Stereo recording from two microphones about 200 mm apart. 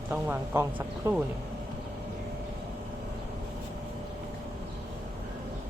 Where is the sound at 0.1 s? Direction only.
10° right (ahead or behind).